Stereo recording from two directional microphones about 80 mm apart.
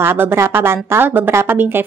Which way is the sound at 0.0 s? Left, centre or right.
Right.